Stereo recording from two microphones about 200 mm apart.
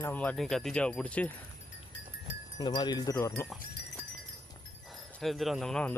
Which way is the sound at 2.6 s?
20° left (ahead or behind).